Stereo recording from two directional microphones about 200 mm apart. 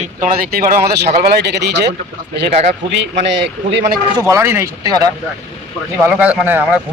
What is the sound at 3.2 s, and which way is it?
Speech, 65° right (ahead or behind).